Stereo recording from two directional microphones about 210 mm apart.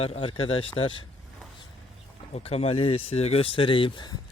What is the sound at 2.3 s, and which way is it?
Speech, 30° left (ahead or behind).